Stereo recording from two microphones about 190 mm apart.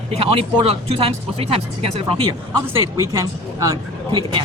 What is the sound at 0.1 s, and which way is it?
Speech, 30° right (ahead or behind).